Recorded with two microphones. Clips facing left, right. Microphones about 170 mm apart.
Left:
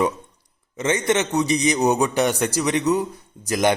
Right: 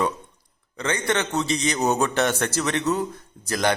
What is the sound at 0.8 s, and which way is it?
A man's voice, 20° left (ahead or behind).